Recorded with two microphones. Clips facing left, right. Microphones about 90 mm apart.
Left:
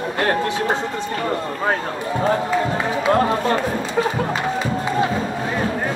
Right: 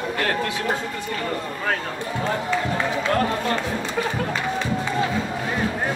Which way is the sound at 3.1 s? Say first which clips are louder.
Left 7 dB; 25° left (ahead or behind).